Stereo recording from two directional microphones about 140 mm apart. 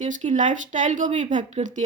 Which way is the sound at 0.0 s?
65° right (ahead or behind).